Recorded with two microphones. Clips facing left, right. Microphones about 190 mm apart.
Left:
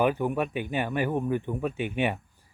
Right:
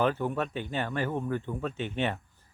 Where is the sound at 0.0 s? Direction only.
15° left (ahead or behind).